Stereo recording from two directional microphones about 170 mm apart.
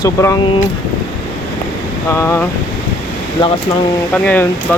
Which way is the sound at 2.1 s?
15° left (ahead or behind).